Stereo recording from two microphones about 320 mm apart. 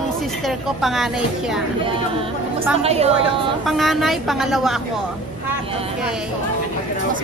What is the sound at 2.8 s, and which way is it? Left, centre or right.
Speech, centre.